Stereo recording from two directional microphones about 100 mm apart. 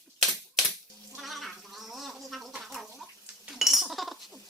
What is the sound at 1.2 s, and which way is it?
Gargling, centre (ahead or behind).